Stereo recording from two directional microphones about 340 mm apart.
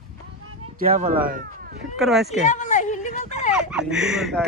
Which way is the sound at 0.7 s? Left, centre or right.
Right.